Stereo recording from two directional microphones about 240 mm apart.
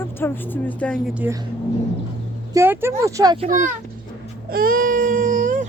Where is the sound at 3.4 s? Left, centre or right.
Right.